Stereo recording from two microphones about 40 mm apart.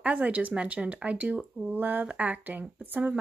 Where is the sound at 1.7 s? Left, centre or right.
Right.